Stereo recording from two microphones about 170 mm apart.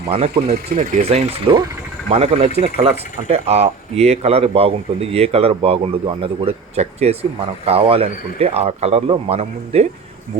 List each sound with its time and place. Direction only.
0.1 s speech: 35° right (ahead or behind)
0.5 s speech: 55° right (ahead or behind)
1.0 s speech: 35° right (ahead or behind)